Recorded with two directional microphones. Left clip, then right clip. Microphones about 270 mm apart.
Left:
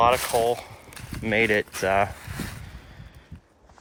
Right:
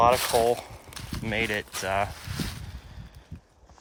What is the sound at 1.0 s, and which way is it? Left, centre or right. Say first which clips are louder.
Speech: left 6 dB; centre.